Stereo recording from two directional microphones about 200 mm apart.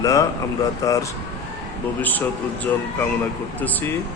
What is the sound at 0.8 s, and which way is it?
Speech, 15° left (ahead or behind).